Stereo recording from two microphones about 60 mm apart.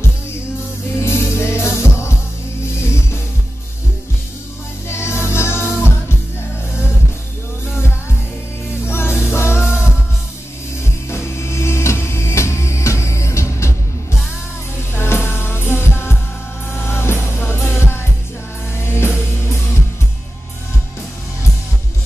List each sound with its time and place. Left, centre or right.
0.9 s music: left
4.8 s music: left
8.8 s music: left
10.8 s music: left
14.9 s music: left